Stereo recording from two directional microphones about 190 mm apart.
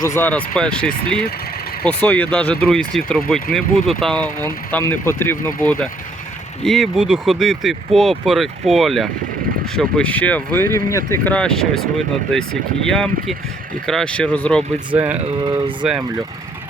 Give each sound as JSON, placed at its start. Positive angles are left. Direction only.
{"t": 0.0, "sound": "speech", "side_deg": 10}
{"t": 6.7, "sound": "speech", "side_deg": 0}
{"t": 14.9, "sound": "speech", "side_deg": -10}
{"t": 15.4, "sound": "speech", "side_deg": -25}
{"t": 15.8, "sound": "speech", "side_deg": -5}